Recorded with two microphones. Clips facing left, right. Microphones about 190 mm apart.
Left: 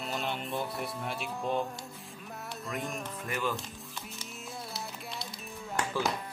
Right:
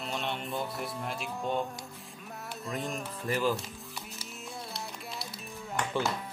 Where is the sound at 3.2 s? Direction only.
35° right (ahead or behind).